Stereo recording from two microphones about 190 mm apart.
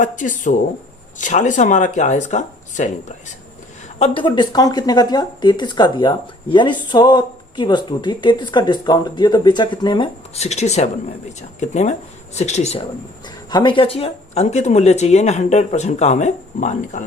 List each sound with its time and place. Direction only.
0.0 s speech: 40° left (ahead or behind)
3.9 s speech: 30° left (ahead or behind)
13.2 s speech: 20° left (ahead or behind); by 17.0 s 40° left (ahead or behind)